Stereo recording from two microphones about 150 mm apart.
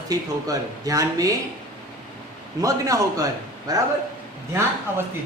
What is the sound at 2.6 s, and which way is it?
Speech, 20° right (ahead or behind).